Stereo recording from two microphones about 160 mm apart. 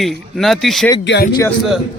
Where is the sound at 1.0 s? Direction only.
90° left.